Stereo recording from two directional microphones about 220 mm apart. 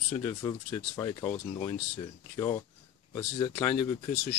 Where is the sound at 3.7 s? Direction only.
25° left (ahead or behind).